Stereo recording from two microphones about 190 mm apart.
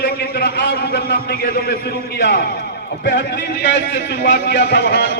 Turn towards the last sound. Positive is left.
turn(degrees=65)  # may be behind; listen again after turning